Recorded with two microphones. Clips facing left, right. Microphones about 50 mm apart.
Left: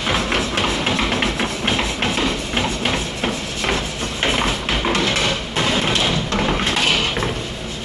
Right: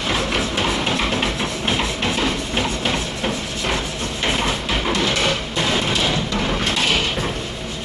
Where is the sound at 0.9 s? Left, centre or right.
Centre.